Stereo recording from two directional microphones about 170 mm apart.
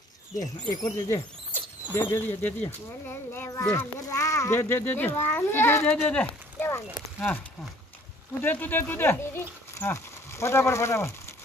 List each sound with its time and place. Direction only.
0.4 s speech: 20° left (ahead or behind)
8.5 s speech: 10° left (ahead or behind)